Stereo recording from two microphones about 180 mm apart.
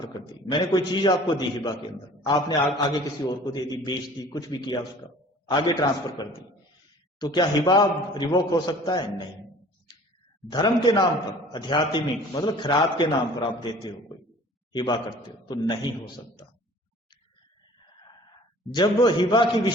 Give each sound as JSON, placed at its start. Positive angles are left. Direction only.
{"t": 0.0, "sound": "a man's voice", "side_deg": 25}
{"t": 10.5, "sound": "a man's voice", "side_deg": 25}
{"t": 18.7, "sound": "a man's voice", "side_deg": 25}